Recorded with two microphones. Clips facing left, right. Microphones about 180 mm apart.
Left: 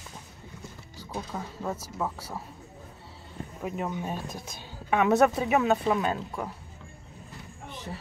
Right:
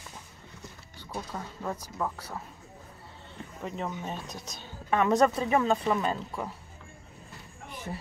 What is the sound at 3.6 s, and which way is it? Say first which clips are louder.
Speech: left 3 dB; 10° left (ahead or behind).